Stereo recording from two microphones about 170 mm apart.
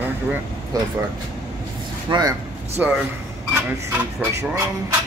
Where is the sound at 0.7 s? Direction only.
20° right (ahead or behind).